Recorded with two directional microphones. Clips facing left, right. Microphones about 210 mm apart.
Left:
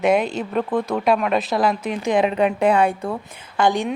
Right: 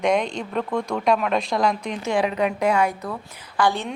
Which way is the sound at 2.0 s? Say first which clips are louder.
Left 4 dB; 20° left (ahead or behind).